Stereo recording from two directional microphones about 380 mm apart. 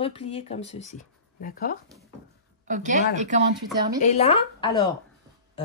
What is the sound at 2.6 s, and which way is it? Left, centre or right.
Speech, centre.